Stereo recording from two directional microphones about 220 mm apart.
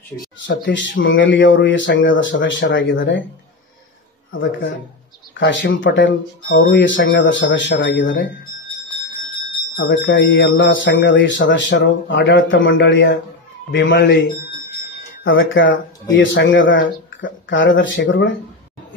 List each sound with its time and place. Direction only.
0.5 s speech: 55° left (ahead or behind)
4.3 s speech: 60° left (ahead or behind)
9.8 s speech: 50° left (ahead or behind)
15.2 s speech: 60° left (ahead or behind)